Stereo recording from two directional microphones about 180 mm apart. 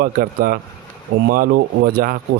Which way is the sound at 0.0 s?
55° right (ahead or behind).